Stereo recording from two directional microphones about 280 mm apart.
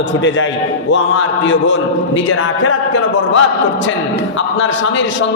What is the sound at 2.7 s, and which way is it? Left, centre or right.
Speech, left.